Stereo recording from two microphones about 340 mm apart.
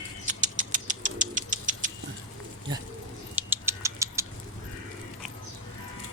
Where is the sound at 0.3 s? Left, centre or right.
Right.